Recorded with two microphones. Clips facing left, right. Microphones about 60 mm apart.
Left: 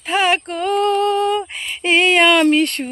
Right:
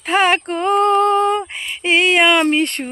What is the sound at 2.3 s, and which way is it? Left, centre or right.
Speech, right.